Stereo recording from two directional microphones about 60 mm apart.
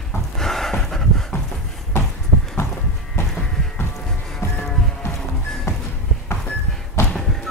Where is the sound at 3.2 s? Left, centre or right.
Left.